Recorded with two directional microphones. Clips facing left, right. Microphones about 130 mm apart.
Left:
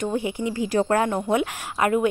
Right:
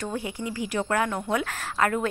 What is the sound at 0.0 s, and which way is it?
Speech, 20° left (ahead or behind).